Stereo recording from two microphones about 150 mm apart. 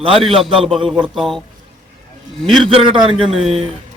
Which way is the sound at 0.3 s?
Centre (ahead or behind).